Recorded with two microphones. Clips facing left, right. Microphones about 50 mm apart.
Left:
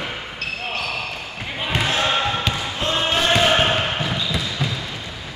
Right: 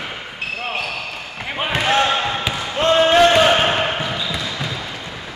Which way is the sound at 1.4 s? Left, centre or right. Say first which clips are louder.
Right 4 dB; right.